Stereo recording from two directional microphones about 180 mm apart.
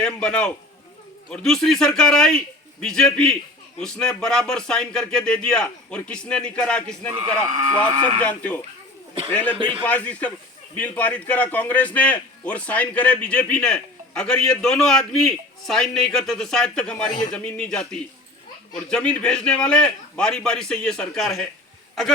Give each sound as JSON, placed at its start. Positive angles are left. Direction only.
{"t": 0.0, "sound": "a man's voice", "side_deg": 5}
{"t": 9.6, "sound": "a man's voice", "side_deg": -25}
{"t": 9.8, "sound": "a man's voice", "side_deg": 10}